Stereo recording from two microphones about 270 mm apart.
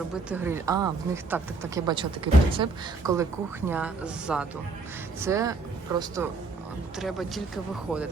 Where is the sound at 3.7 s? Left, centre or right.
Centre.